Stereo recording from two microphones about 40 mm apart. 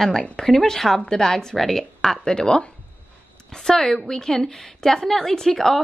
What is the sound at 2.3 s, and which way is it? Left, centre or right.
A woman's voice, centre.